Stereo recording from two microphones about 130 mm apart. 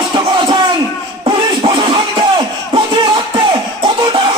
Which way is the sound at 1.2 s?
40° right (ahead or behind).